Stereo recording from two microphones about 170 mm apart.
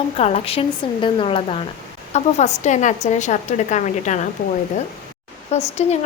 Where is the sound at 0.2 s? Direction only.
35° left (ahead or behind).